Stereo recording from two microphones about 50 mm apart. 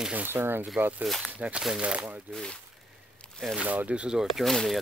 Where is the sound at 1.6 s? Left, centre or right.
Centre.